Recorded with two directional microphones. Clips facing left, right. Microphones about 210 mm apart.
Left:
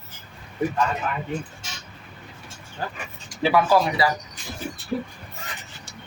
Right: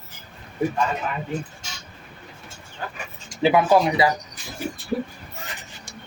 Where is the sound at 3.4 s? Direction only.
20° right (ahead or behind).